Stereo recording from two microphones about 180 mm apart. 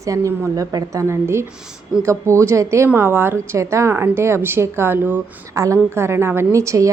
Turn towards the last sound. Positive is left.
turn(degrees=-15)  # may be behind; listen again after turning